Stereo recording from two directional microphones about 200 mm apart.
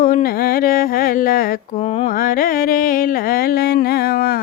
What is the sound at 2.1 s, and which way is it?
Mantra, 45° left (ahead or behind).